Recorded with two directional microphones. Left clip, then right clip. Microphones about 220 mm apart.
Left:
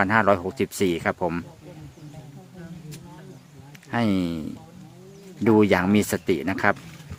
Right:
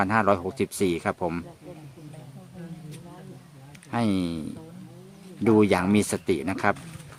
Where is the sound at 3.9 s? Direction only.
5° left (ahead or behind).